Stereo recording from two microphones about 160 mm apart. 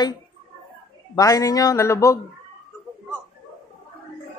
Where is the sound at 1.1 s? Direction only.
20° left (ahead or behind).